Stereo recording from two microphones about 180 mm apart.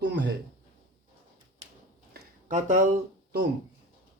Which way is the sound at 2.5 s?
45° right (ahead or behind).